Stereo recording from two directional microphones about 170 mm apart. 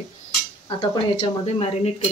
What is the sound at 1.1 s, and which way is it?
Speech, 40° left (ahead or behind).